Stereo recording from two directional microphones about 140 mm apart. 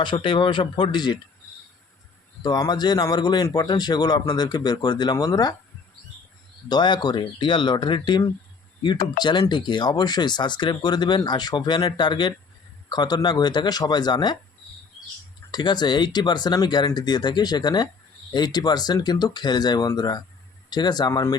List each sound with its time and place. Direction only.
0.0 s speech: 35° left (ahead or behind)
2.4 s speech: 30° left (ahead or behind)
6.7 s speech: 30° left (ahead or behind)
15.5 s speech: 30° left (ahead or behind)